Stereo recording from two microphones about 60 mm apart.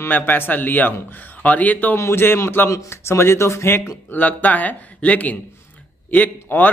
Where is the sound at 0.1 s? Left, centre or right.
Left.